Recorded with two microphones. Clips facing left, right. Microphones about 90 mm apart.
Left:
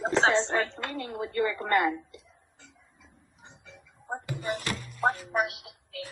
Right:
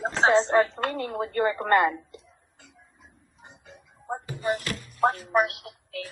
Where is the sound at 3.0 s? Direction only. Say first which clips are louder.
Right 2 dB; 50° right (ahead or behind).